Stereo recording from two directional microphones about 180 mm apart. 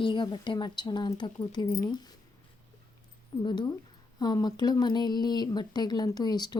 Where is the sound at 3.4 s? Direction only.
25° left (ahead or behind).